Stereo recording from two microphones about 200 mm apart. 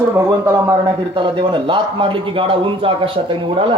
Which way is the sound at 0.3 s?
15° right (ahead or behind).